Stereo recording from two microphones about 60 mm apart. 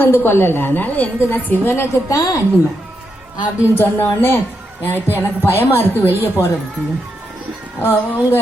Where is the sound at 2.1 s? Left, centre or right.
Left.